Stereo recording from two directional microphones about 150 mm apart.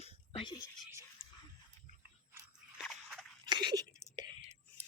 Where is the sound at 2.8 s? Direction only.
5° right (ahead or behind).